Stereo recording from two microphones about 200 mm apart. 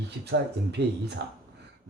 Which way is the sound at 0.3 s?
60° right (ahead or behind).